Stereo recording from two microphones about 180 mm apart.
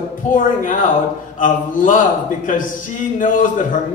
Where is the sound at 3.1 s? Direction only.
45° left (ahead or behind).